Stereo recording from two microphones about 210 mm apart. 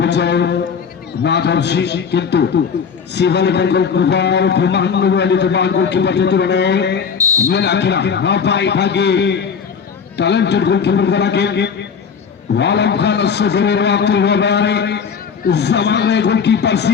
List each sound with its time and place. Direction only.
0.0 s a sound: 55° left (ahead or behind)
1.2 s a man's voice: 55° left (ahead or behind)
7.2 s fire alarm: 15° right (ahead or behind)
7.5 s a man's voice: 55° left (ahead or behind)